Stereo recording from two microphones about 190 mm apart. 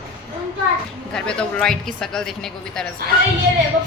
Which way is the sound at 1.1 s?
5° left (ahead or behind).